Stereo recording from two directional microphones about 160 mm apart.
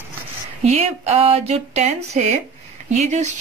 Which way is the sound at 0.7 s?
40° right (ahead or behind).